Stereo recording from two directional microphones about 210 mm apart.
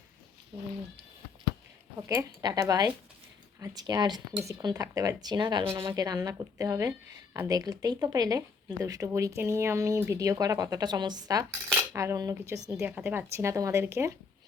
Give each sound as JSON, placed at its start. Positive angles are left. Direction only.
{"t": 2.0, "sound": "speech", "side_deg": -15}